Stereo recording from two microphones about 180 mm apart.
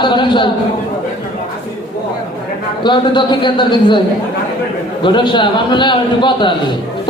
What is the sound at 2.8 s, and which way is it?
A man's voice, 25° left (ahead or behind).